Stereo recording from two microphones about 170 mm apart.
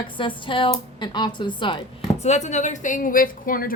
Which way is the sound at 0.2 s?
30° left (ahead or behind).